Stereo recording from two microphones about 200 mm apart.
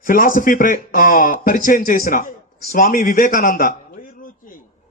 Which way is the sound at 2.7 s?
45° left (ahead or behind).